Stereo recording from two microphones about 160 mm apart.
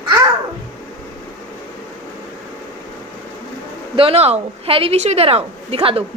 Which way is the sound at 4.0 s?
40° right (ahead or behind).